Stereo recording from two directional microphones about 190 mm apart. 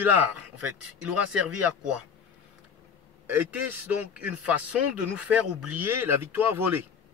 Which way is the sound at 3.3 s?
10° right (ahead or behind).